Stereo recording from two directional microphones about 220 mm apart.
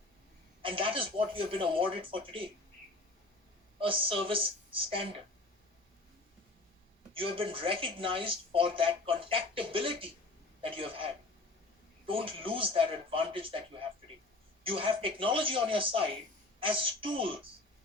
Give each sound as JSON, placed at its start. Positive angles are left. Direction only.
{"t": 0.6, "sound": "speech", "side_deg": -25}
{"t": 3.8, "sound": "speech", "side_deg": -25}
{"t": 7.1, "sound": "speech", "side_deg": -25}